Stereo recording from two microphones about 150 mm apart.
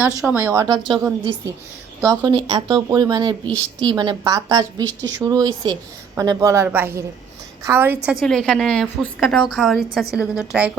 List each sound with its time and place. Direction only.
0.3 s a woman's voice: 15° right (ahead or behind)
8.1 s a woman's voice: centre (ahead or behind)